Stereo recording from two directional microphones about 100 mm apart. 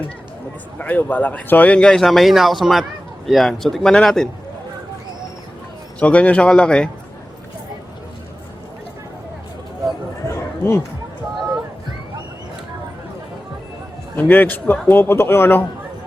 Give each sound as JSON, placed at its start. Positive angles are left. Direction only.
{"t": 0.8, "sound": "a man's voice", "side_deg": 15}
{"t": 6.0, "sound": "speech", "side_deg": 15}
{"t": 10.2, "sound": "a sound", "side_deg": 25}
{"t": 14.2, "sound": "a man's voice", "side_deg": 20}